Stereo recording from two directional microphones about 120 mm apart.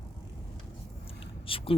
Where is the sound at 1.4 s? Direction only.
50° left (ahead or behind).